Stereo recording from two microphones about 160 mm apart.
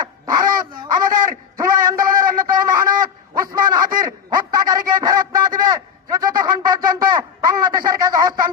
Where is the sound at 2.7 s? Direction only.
25° right (ahead or behind).